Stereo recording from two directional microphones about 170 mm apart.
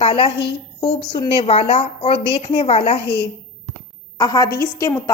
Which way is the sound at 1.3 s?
35° left (ahead or behind).